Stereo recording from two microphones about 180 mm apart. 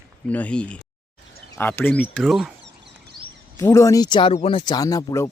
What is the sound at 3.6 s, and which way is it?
Speech, 15° left (ahead or behind).